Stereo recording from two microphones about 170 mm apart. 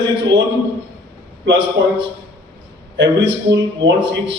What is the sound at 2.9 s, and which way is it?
Speech, 90° right.